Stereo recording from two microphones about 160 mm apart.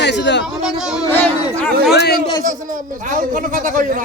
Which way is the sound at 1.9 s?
85° left.